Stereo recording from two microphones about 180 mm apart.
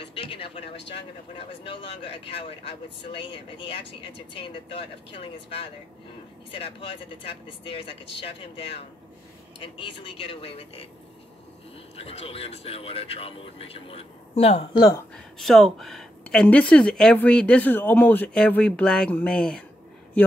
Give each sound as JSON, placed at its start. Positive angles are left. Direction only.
{"t": 0.0, "sound": "a sound", "side_deg": 30}
{"t": 1.6, "sound": "speech", "side_deg": 25}
{"t": 9.8, "sound": "a man's voice", "side_deg": 25}
{"t": 12.0, "sound": "a man's voice", "side_deg": 35}
{"t": 15.3, "sound": "speech", "side_deg": 0}